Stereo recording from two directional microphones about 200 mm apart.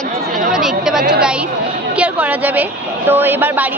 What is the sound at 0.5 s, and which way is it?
Chatter, 5° right (ahead or behind).